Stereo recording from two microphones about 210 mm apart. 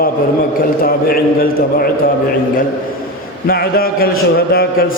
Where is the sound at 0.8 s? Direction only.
45° left (ahead or behind).